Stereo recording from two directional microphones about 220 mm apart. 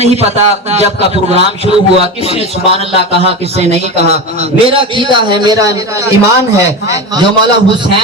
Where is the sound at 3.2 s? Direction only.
30° right (ahead or behind).